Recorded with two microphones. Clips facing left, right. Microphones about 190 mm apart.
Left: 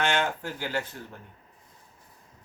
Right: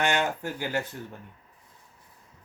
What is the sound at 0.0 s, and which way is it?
Speech, 15° right (ahead or behind).